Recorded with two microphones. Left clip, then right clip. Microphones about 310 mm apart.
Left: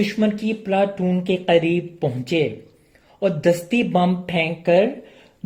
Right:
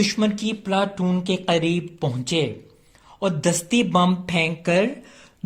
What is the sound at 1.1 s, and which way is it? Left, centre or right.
Speech, right.